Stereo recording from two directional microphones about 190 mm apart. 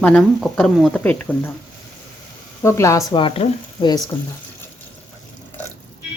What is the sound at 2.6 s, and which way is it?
Speech, 15° left (ahead or behind).